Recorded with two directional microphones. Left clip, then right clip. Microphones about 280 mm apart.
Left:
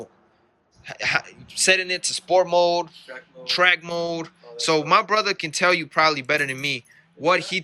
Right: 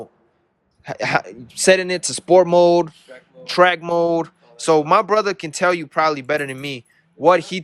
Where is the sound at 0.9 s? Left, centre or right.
Centre.